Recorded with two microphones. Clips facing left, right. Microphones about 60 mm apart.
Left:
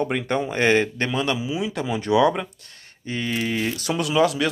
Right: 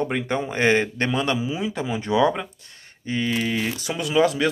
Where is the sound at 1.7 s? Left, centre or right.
Centre.